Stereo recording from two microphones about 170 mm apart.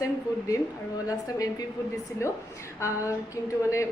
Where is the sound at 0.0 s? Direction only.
20° left (ahead or behind).